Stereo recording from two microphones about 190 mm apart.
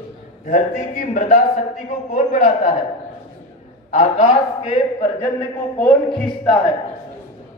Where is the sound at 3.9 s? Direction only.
40° left (ahead or behind).